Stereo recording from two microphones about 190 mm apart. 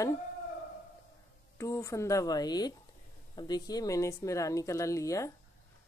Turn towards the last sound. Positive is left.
turn(degrees=15)  # may be behind; listen again after turning